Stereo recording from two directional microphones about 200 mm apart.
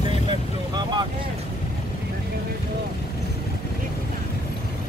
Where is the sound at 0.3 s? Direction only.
20° right (ahead or behind).